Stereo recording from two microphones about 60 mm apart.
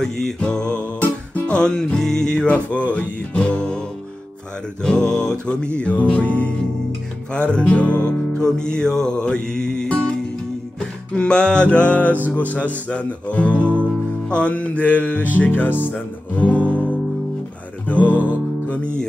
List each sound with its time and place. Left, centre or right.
0.4 s music: centre
4.8 s speech: centre
8.4 s music: centre
11.1 s speech: centre; by 15.7 s left
15.9 s music: left
17.8 s music: left